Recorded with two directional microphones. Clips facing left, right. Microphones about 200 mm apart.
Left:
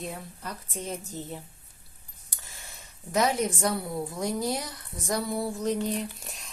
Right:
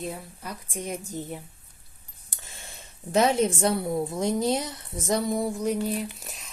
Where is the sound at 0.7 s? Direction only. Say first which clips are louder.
Right 3 dB; 15° right (ahead or behind).